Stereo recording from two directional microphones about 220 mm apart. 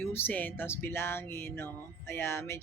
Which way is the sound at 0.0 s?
10° left (ahead or behind).